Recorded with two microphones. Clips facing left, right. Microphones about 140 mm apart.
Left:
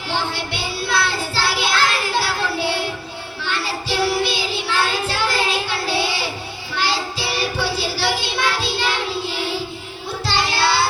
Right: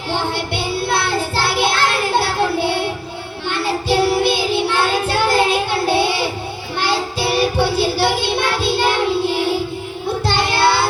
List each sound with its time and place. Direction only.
0.1 s child singing: 50° right (ahead or behind)